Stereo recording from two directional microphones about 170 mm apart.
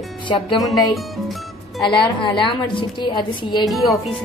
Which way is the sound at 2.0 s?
30° left (ahead or behind).